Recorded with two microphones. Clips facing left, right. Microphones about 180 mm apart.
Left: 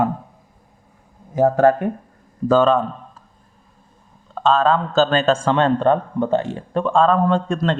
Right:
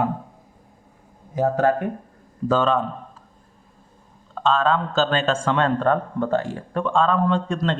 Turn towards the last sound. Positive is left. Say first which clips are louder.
# left 3 dB
turn(degrees=45)  # may be behind; listen again after turning